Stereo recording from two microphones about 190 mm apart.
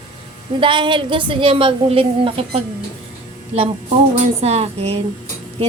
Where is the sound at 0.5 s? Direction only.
25° right (ahead or behind).